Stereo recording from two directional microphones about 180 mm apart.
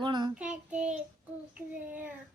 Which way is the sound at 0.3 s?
5° right (ahead or behind).